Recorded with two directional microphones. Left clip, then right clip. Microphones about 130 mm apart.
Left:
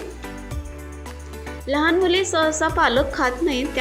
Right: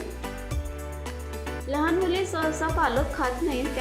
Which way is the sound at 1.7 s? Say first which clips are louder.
Left 7 dB; 30° left (ahead or behind).